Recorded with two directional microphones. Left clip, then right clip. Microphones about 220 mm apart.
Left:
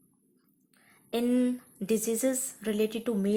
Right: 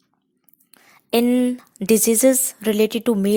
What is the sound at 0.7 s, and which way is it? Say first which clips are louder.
Speech: right 13 dB; 40° right (ahead or behind).